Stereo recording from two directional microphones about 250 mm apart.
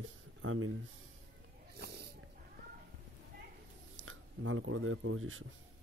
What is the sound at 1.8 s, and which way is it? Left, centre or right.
Snort, right.